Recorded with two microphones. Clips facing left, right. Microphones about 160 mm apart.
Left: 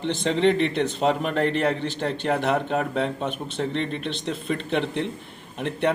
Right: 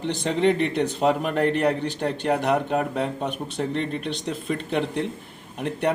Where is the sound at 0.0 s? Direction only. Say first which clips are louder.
Left 1 dB; 10° right (ahead or behind).